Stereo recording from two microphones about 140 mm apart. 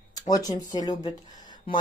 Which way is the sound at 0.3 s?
25° left (ahead or behind).